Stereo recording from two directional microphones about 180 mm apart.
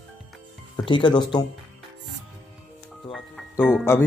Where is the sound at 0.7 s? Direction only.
25° left (ahead or behind).